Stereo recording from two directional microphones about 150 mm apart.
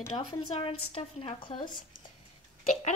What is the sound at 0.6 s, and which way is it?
Speech, 35° left (ahead or behind).